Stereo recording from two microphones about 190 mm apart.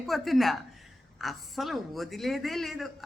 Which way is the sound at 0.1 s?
Centre (ahead or behind).